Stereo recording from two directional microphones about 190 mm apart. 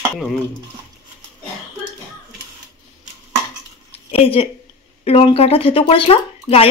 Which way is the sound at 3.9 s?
30° left (ahead or behind).